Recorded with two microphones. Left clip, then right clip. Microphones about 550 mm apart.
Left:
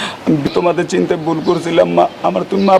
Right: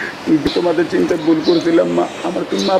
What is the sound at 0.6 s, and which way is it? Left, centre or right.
Speech, left.